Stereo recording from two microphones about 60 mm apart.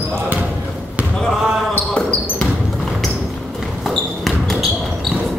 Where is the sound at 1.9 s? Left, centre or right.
Left.